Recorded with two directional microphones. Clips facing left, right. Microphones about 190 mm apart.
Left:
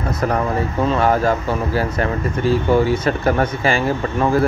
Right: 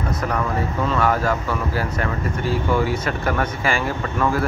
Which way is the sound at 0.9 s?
30° left (ahead or behind).